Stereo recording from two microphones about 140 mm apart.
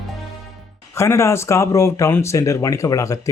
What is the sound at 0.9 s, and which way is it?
Speech, 20° left (ahead or behind).